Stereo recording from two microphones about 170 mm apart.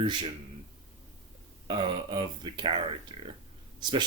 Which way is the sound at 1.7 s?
25° right (ahead or behind).